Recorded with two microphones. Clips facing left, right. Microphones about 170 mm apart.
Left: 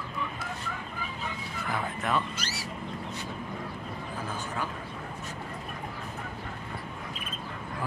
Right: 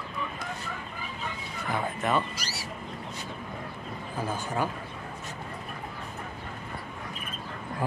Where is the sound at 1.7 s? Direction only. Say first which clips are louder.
Right 3 dB; centre (ahead or behind).